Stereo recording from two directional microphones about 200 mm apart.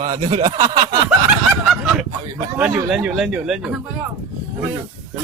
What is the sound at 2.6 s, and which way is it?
Speech, 5° right (ahead or behind).